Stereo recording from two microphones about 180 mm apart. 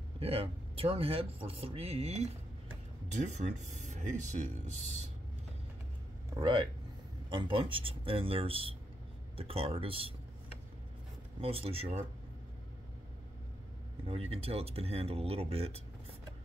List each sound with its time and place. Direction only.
0.2 s speech: 30° right (ahead or behind)
6.3 s speech: 25° right (ahead or behind)
11.4 s speech: 35° right (ahead or behind)
14.0 s speech: 35° right (ahead or behind)